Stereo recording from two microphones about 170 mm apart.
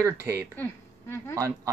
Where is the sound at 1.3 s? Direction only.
15° right (ahead or behind).